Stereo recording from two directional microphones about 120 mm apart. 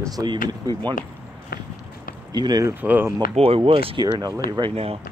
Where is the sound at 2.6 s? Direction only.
15° right (ahead or behind).